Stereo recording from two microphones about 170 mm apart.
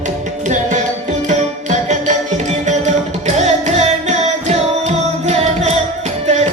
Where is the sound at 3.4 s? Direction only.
45° right (ahead or behind).